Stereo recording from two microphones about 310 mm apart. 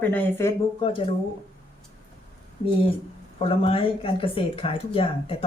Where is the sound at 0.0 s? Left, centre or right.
Centre.